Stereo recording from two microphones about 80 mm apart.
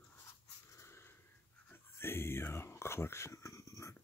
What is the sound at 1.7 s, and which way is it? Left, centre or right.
Whispering, left.